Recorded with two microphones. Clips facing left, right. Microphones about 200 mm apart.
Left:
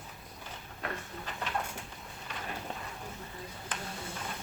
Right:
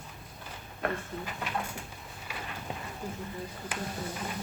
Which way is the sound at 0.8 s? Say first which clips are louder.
Right 7 dB; 55° right (ahead or behind).